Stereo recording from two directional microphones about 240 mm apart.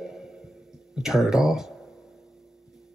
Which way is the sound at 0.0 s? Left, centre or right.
Centre.